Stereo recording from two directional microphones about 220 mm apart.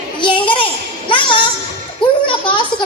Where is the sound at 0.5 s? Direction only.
25° left (ahead or behind).